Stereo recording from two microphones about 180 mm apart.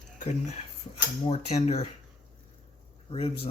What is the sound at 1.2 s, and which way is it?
Speech, 35° left (ahead or behind).